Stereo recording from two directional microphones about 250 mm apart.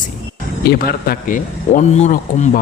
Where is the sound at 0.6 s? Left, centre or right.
Left.